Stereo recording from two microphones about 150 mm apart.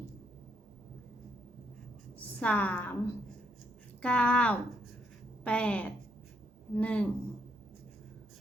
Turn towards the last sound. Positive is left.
turn(degrees=10)  # may be behind; listen again after turning